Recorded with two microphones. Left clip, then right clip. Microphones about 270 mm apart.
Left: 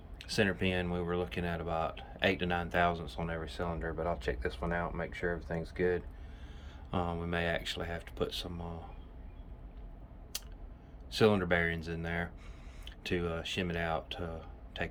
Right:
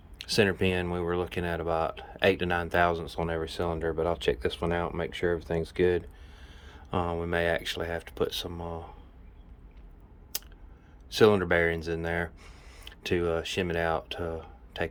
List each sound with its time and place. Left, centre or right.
0.2 s speech: right
6.9 s speech: centre
10.3 s a sound: centre
11.1 s speech: centre